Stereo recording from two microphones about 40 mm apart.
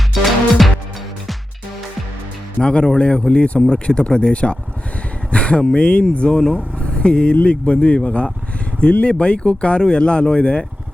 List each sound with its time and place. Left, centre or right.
0.1 s music: centre
2.6 s speech: left
6.7 s vehicle: left
7.4 s speech: left